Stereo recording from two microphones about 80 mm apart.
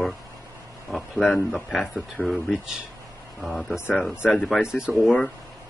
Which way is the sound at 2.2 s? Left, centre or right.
Centre.